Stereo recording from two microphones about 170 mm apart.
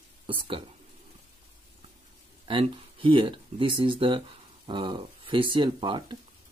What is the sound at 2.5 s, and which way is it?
Speech, 30° right (ahead or behind).